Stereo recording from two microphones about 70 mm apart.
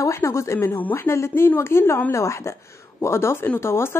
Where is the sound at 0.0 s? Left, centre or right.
Left.